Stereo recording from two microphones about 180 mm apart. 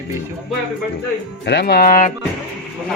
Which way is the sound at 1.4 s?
65° left (ahead or behind).